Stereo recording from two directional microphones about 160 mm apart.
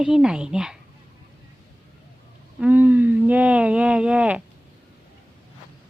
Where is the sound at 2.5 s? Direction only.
10° right (ahead or behind).